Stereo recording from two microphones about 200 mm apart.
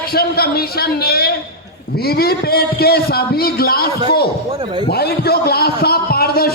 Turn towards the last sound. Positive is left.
turn(degrees=50)  # may be behind; listen again after turning